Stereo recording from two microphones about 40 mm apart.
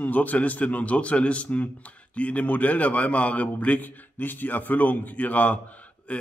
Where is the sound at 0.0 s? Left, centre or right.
Left.